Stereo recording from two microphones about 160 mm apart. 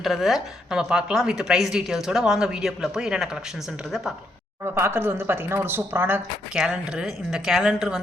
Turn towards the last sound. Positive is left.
turn(degrees=-5)  # may be behind; listen again after turning